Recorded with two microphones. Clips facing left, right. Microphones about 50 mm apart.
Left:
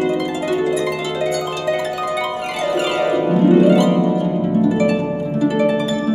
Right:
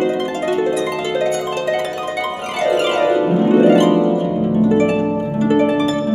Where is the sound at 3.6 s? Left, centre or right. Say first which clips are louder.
Right 2 dB; right.